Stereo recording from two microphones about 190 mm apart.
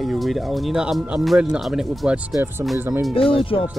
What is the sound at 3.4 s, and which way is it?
Speech, 30° left (ahead or behind).